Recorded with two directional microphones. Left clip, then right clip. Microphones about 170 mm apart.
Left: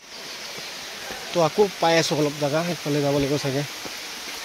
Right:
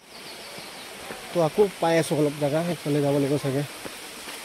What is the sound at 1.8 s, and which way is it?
Speech, 15° right (ahead or behind).